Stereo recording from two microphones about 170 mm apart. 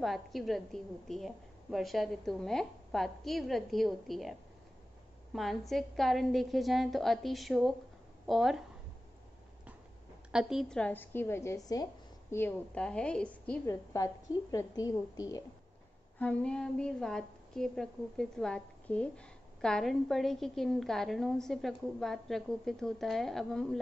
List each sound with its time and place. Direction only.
0.0 s a woman's voice: centre (ahead or behind)
10.3 s a woman's voice: centre (ahead or behind)
13.7 s a woman's voice: 20° left (ahead or behind)
16.2 s a woman's voice: 5° left (ahead or behind)